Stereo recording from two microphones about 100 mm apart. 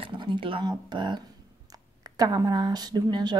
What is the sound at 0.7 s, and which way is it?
Speech, 50° right (ahead or behind).